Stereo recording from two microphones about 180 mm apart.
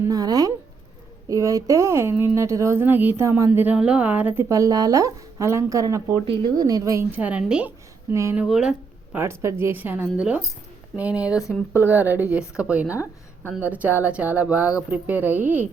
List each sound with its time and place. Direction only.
0.0 s a sound: 20° right (ahead or behind)
1.3 s a woman's voice: 20° right (ahead or behind)
8.4 s speech: 5° right (ahead or behind)
9.1 s a woman's voice: 15° right (ahead or behind)